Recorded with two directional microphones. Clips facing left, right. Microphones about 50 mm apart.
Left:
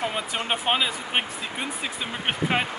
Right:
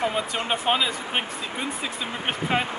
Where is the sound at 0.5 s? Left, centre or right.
Centre.